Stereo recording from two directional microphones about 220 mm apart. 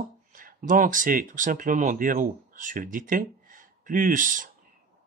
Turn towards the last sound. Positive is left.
turn(degrees=-35)  # may be behind; listen again after turning